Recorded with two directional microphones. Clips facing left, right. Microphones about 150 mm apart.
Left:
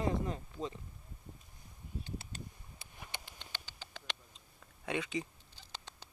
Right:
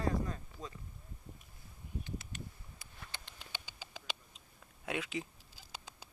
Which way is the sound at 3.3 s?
10° right (ahead or behind).